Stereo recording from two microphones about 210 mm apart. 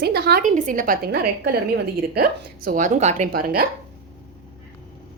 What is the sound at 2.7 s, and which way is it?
Speech, 40° right (ahead or behind).